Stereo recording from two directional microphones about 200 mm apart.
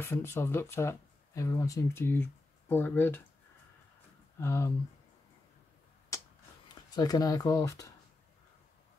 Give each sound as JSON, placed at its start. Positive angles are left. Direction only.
{"t": 0.0, "sound": "speech", "side_deg": 10}
{"t": 4.4, "sound": "speech", "side_deg": 15}
{"t": 6.1, "sound": "a sound", "side_deg": 15}
{"t": 6.9, "sound": "speech", "side_deg": 20}